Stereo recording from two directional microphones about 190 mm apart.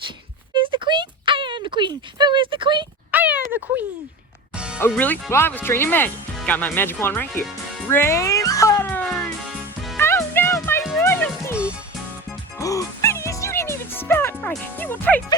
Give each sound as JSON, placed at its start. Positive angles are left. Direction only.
{"t": 0.5, "sound": "a sound", "side_deg": -25}
{"t": 3.1, "sound": "a sound", "side_deg": -10}
{"t": 4.5, "sound": "music", "side_deg": -5}
{"t": 4.8, "sound": "speech", "side_deg": 10}
{"t": 7.9, "sound": "music", "side_deg": 10}
{"t": 12.5, "sound": "music", "side_deg": 15}